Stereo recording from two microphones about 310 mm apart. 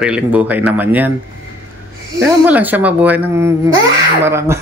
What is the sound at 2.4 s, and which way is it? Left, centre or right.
Speech, centre.